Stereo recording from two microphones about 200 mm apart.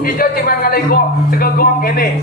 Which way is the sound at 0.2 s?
50° left (ahead or behind).